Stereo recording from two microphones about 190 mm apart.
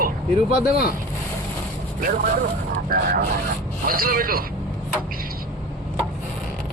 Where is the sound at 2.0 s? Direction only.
50° right (ahead or behind).